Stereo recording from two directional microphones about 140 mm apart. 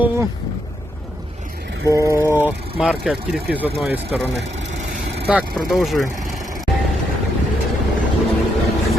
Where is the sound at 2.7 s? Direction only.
5° right (ahead or behind).